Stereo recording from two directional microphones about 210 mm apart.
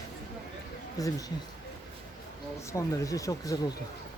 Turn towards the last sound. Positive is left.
turn(degrees=15)  # may be behind; listen again after turning